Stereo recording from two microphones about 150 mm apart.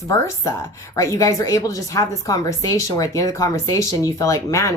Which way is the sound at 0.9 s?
20° left (ahead or behind).